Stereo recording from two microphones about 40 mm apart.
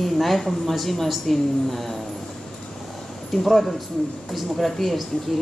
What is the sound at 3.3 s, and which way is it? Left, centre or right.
Speech, centre.